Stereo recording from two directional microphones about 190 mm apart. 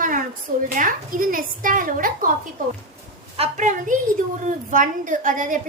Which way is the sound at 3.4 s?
40° right (ahead or behind).